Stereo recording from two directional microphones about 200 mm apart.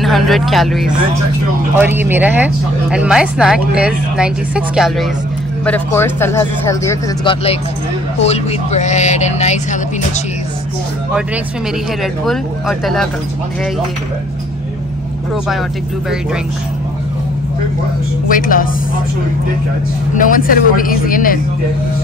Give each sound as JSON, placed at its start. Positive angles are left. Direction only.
{"t": 0.0, "sound": "speech", "side_deg": 0}
{"t": 1.8, "sound": "speech", "side_deg": -10}
{"t": 5.7, "sound": "speech", "side_deg": 10}
{"t": 8.2, "sound": "speech", "side_deg": 30}
{"t": 12.0, "sound": "speech", "side_deg": 0}
{"t": 18.3, "sound": "speech", "side_deg": 45}
{"t": 20.2, "sound": "speech", "side_deg": 45}